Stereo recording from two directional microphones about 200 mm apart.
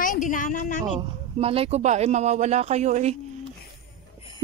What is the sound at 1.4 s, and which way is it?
Speech, 30° right (ahead or behind).